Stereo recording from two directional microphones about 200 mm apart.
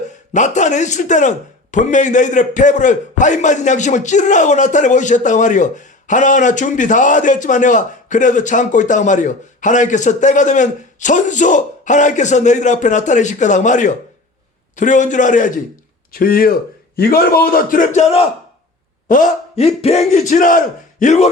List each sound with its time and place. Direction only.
0.3 s a man's voice: 35° left (ahead or behind)